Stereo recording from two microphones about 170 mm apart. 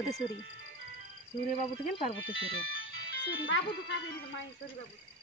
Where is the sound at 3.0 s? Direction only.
90° left.